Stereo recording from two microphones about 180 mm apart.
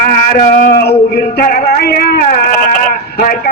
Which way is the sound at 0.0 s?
50° left (ahead or behind).